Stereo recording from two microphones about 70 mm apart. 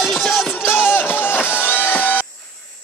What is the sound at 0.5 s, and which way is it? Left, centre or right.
Music, left.